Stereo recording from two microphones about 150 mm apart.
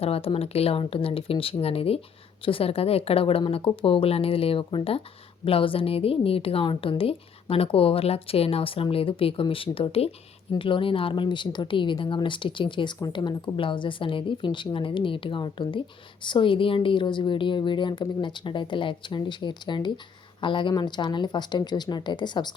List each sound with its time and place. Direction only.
0.0 s speech: 40° left (ahead or behind)